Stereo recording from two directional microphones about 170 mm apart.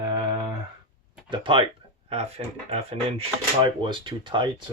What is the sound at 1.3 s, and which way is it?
Speech, 30° right (ahead or behind).